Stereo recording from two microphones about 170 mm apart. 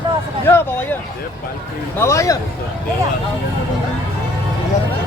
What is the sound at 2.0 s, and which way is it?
Speech, 15° left (ahead or behind).